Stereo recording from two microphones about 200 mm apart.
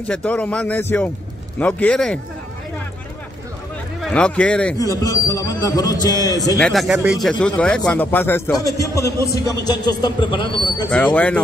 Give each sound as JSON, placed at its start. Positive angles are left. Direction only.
{"t": 0.1, "sound": "a man's voice", "side_deg": 5}
{"t": 4.0, "sound": "speech", "side_deg": 5}
{"t": 4.7, "sound": "a man's voice", "side_deg": 15}
{"t": 6.6, "sound": "a man's voice", "side_deg": 0}